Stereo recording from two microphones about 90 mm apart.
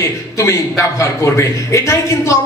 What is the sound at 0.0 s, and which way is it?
A man's voice, 30° left (ahead or behind).